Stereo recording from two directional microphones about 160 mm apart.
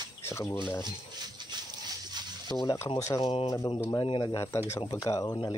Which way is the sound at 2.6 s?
20° left (ahead or behind).